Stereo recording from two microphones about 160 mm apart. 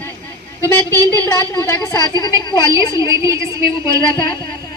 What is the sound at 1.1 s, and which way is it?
A woman's voice, 20° left (ahead or behind).